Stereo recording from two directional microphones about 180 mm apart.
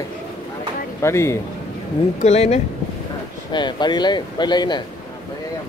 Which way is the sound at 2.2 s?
35° left (ahead or behind).